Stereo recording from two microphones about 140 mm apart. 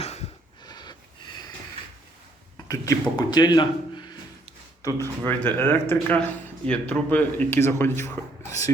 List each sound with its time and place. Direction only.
0.0 s a sound: 50° left (ahead or behind)
0.6 s snort: 30° left (ahead or behind)
2.6 s speech: 25° left (ahead or behind)
5.2 s speech: 15° left (ahead or behind)